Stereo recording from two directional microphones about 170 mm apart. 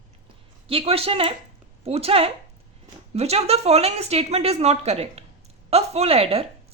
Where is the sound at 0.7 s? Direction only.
35° right (ahead or behind).